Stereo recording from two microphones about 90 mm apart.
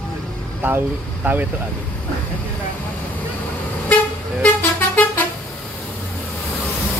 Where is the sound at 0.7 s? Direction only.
20° right (ahead or behind).